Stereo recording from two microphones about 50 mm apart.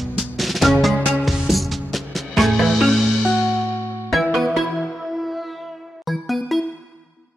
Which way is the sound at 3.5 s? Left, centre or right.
Left.